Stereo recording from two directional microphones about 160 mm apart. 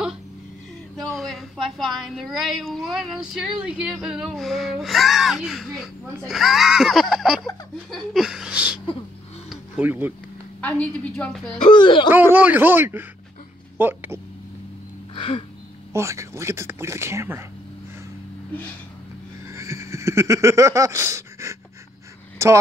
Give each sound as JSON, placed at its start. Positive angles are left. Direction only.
{"t": 0.9, "sound": "a woman's voice", "side_deg": 0}
{"t": 9.5, "sound": "a sound", "side_deg": -10}
{"t": 10.6, "sound": "a woman's voice", "side_deg": 5}
{"t": 11.7, "sound": "speech", "side_deg": 30}
{"t": 12.1, "sound": "speech", "side_deg": -10}
{"t": 15.1, "sound": "a sound", "side_deg": 35}
{"t": 15.9, "sound": "speech", "side_deg": -15}
{"t": 19.4, "sound": "a sound", "side_deg": -20}
{"t": 22.4, "sound": "a man's voice", "side_deg": -20}